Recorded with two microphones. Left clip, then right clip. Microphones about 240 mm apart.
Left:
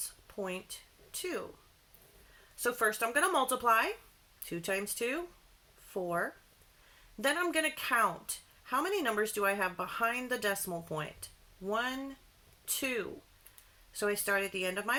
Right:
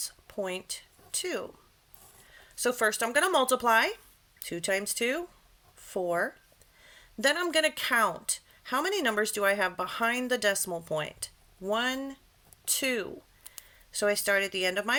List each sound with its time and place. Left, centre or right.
1.2 s a woman's voice: right
2.6 s a woman's voice: right
10.7 s speech: right
11.6 s a woman's voice: right